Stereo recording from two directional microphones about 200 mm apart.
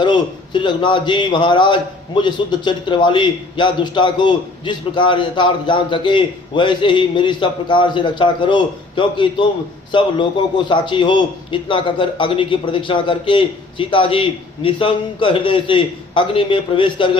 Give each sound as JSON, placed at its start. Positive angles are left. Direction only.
{"t": 0.0, "sound": "a man's voice", "side_deg": 25}